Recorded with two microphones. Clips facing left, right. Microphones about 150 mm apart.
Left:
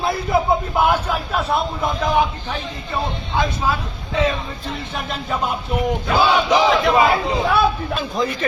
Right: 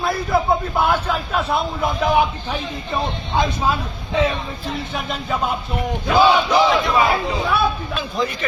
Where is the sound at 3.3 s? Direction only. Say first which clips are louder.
Right 1 dB; 15° right (ahead or behind).